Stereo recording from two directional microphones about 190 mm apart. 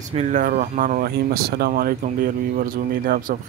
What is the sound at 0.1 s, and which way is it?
Speech, 40° right (ahead or behind).